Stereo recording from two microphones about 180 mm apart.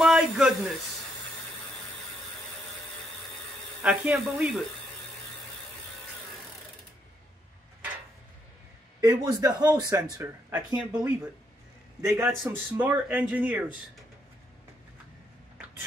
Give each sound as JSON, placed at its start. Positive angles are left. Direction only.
{"t": 0.0, "sound": "a sound", "side_deg": -5}
{"t": 3.8, "sound": "speech", "side_deg": -5}
{"t": 9.0, "sound": "a man's voice", "side_deg": -15}